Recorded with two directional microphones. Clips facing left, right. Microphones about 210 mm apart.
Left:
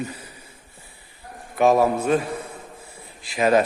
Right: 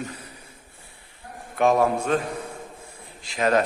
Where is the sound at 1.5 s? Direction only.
5° left (ahead or behind).